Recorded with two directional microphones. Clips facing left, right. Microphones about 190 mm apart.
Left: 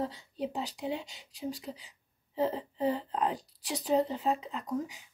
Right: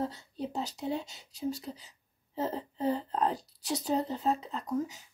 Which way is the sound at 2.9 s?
40° right (ahead or behind).